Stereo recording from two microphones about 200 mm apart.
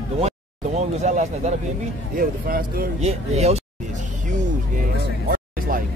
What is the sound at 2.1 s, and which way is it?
Speech, 45° right (ahead or behind).